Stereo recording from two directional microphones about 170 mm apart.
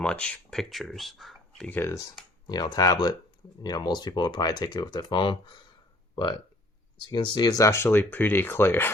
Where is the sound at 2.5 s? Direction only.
25° left (ahead or behind).